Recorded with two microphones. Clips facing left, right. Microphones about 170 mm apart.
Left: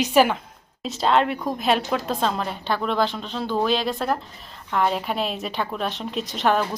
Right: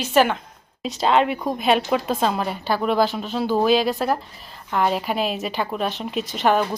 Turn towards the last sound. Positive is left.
turn(degrees=0)  # may be behind; listen again after turning